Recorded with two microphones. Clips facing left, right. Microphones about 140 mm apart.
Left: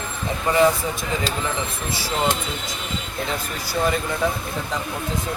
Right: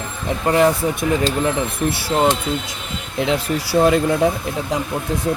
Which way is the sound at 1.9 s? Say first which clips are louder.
Right 5 dB; 65° right (ahead or behind).